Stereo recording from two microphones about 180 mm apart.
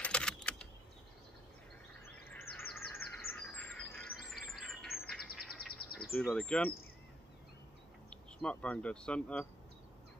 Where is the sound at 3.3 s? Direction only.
5° left (ahead or behind).